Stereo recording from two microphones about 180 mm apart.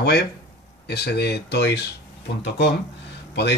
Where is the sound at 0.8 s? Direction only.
65° left (ahead or behind).